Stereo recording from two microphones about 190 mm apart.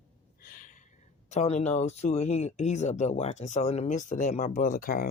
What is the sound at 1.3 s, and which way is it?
Speech, 35° left (ahead or behind).